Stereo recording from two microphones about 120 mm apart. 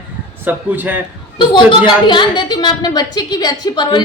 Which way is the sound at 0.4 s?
15° right (ahead or behind).